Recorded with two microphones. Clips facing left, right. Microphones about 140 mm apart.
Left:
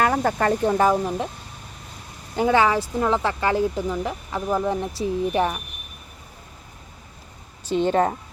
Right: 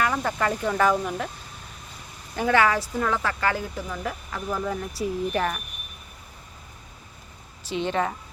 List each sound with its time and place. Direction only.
0.0 s speech: 45° left (ahead or behind)
2.3 s speech: 25° left (ahead or behind)
7.7 s speech: 45° left (ahead or behind)